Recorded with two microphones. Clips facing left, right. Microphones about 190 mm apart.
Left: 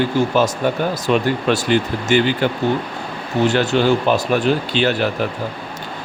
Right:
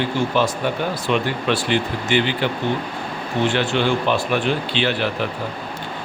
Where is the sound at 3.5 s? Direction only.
40° left (ahead or behind).